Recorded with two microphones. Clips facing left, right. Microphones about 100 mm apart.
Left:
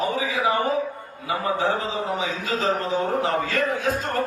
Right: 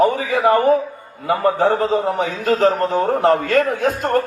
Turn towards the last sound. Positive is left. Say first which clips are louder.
# right 5 dB
turn(degrees=-55)  # may be behind; listen again after turning